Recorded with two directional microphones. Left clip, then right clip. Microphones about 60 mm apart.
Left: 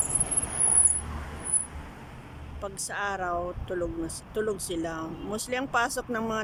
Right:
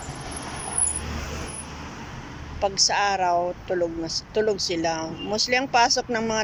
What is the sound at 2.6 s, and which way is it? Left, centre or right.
Speech, left.